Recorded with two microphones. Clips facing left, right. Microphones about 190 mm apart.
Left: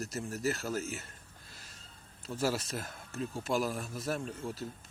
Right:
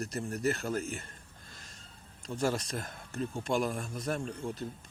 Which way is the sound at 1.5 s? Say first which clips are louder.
Right 2 dB; 5° left (ahead or behind).